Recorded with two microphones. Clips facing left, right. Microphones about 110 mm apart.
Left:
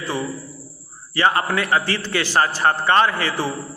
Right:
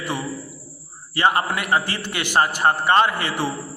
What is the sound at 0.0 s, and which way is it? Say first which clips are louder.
A man's voice: left 1 dB; 20° right (ahead or behind).